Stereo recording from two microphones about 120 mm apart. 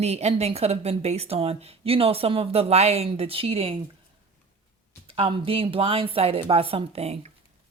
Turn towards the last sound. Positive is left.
turn(degrees=-60)  # may be behind; listen again after turning